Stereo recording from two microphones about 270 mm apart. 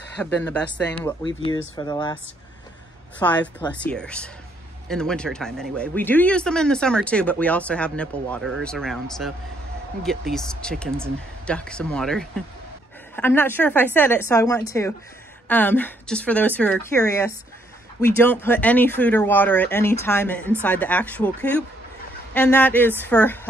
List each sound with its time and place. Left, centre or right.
0.2 s speech: centre
1.2 s speech: centre
3.2 s speech: centre